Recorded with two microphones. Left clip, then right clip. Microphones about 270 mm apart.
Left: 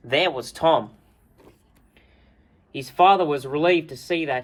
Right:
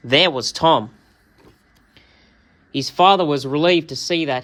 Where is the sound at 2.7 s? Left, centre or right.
Right.